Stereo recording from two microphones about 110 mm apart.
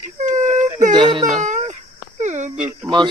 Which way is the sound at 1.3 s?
90° right.